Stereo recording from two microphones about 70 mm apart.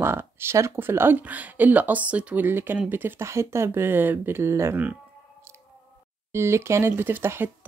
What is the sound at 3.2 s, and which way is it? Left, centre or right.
Speech, right.